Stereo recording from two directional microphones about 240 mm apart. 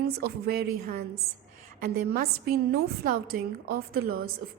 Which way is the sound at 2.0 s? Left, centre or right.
Right.